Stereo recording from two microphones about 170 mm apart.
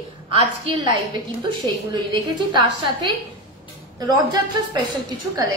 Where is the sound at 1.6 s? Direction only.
25° right (ahead or behind).